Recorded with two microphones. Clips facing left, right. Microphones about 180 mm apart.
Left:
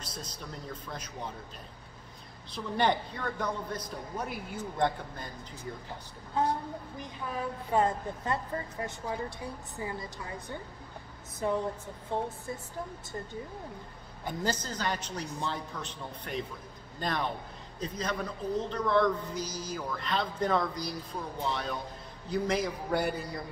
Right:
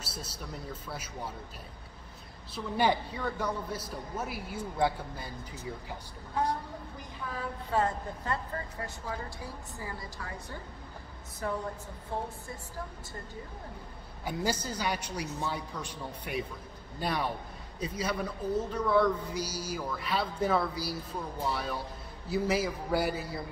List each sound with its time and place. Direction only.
0.0 s a sound: 10° right (ahead or behind)
0.8 s speech: 5° right (ahead or behind)
2.5 s speech: 5° right (ahead or behind)
7.7 s a woman's voice: 20° left (ahead or behind)
14.2 s a man's voice: 10° right (ahead or behind)